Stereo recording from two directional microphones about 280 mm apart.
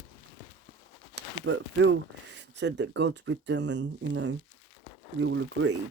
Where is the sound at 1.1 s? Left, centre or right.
Right.